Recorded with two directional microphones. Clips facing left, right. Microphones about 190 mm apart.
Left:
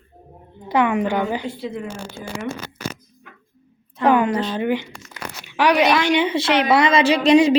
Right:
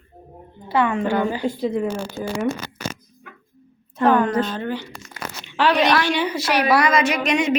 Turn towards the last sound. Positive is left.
turn(degrees=30)  # may be behind; listen again after turning